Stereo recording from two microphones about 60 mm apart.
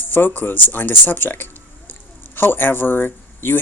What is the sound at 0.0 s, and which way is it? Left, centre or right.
Speech, left.